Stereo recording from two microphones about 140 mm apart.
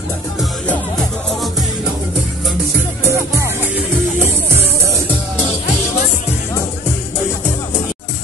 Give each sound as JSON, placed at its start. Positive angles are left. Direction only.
{"t": 0.7, "sound": "music", "side_deg": 5}
{"t": 3.1, "sound": "music", "side_deg": -20}